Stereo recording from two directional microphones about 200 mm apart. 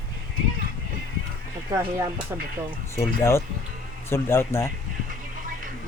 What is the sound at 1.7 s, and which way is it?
Speech, 15° right (ahead or behind).